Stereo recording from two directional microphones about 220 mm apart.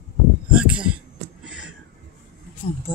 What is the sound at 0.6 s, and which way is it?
Heart sounds, 5° right (ahead or behind).